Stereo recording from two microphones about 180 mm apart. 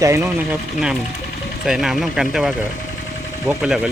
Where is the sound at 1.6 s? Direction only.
Centre (ahead or behind).